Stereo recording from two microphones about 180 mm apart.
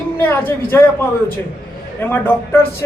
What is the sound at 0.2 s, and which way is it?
Speech, 10° left (ahead or behind).